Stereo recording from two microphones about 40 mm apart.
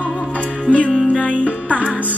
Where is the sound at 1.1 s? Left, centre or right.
Left.